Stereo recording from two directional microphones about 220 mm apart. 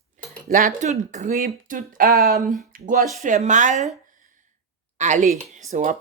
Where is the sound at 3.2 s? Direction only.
35° right (ahead or behind).